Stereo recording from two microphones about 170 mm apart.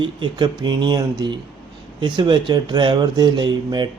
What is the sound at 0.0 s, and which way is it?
A man's voice, 25° right (ahead or behind).